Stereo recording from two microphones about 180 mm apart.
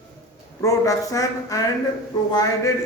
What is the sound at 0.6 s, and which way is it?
A man's voice, 20° left (ahead or behind).